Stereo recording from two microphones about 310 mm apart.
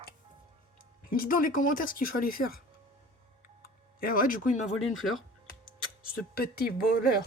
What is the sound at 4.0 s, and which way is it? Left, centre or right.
Speech, left.